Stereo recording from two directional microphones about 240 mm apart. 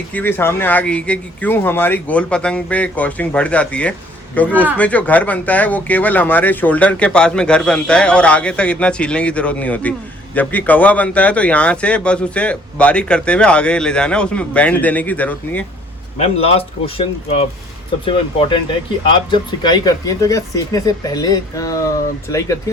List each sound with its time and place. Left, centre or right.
0.1 s speech: centre
4.5 s speech: centre
4.8 s speech: centre
16.1 s speech: left